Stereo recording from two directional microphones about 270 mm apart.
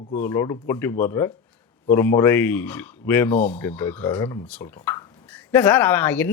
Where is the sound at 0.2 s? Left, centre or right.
Centre.